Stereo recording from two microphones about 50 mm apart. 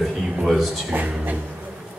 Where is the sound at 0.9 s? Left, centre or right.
Right.